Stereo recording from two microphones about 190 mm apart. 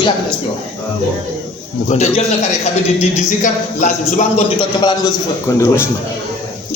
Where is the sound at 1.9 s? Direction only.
35° left (ahead or behind).